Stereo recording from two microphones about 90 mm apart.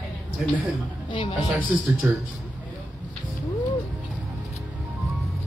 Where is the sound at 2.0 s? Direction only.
25° right (ahead or behind).